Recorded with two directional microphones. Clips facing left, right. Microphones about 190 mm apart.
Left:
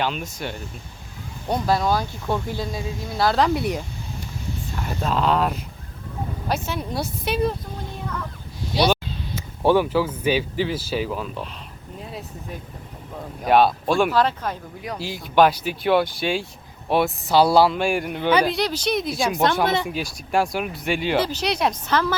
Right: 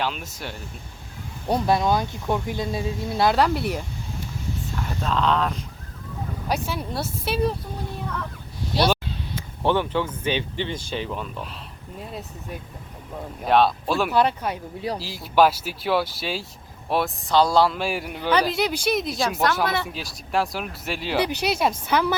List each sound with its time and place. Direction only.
0.0 s speech: 5° right (ahead or behind)
1.6 s speech: 20° right (ahead or behind)
3.3 s speech: 5° right (ahead or behind)
6.7 s speech: 5° right (ahead or behind)
8.7 s speech: centre (ahead or behind)
9.6 s speech: 10° left (ahead or behind); by 14.6 s 10° right (ahead or behind)
14.8 s speech: 30° right (ahead or behind)
15.0 s speech: 5° right (ahead or behind)
19.6 s speech: 20° left (ahead or behind)
19.9 s a woman's voice: centre (ahead or behind)